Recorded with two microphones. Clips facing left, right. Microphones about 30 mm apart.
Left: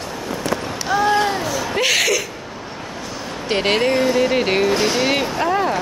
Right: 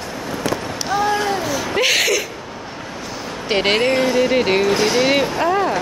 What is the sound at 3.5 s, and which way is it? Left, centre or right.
Speech, centre.